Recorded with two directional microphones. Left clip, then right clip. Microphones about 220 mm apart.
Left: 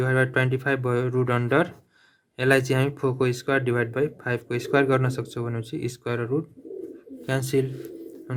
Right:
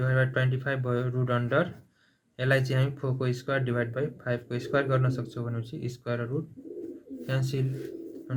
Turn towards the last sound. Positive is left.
turn(degrees=45)  # may be behind; listen again after turning